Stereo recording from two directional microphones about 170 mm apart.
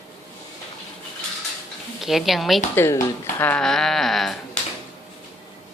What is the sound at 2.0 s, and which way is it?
Speech, centre (ahead or behind).